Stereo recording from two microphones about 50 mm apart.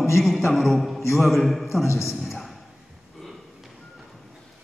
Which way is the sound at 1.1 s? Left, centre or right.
Centre.